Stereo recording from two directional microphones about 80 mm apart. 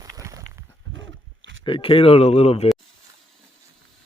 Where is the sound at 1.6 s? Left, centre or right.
Left.